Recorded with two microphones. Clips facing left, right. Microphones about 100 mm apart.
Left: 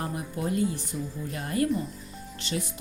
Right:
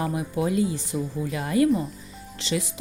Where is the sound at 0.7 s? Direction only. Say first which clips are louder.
Right 5 dB; 90° right.